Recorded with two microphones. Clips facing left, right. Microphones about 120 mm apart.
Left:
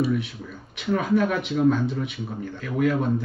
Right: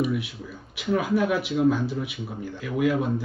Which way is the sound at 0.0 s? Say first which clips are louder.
Left 2 dB; 10° right (ahead or behind).